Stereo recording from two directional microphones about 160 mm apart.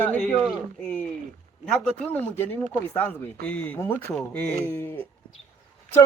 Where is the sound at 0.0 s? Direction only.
10° left (ahead or behind).